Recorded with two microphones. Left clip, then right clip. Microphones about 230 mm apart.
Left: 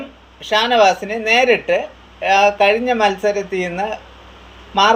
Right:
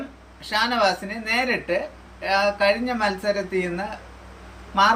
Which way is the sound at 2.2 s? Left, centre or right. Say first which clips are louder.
Left 8 dB; right.